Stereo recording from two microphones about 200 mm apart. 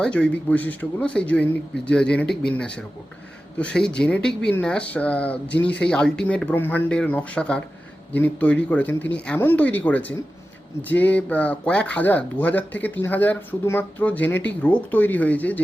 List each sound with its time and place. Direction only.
0.0 s speech: 5° left (ahead or behind)